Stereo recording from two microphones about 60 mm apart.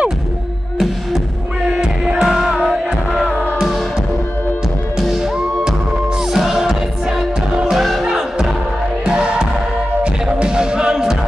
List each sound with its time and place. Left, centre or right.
1.8 s music: centre
2.6 s music: right
6.3 s music: centre
7.7 s music: centre